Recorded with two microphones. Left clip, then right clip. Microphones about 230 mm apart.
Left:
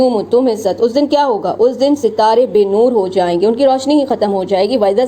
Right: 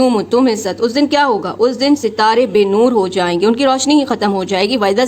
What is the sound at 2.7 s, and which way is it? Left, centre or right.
Speech, right.